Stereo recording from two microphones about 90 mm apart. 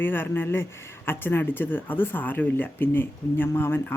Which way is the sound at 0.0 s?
25° left (ahead or behind).